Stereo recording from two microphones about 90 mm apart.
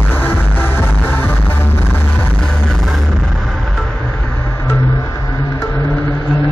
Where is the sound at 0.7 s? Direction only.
25° left (ahead or behind).